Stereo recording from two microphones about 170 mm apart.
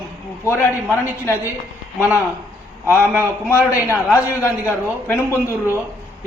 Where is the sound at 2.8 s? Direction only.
15° left (ahead or behind).